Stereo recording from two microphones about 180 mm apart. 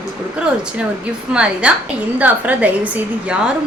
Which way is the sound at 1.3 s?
5° right (ahead or behind).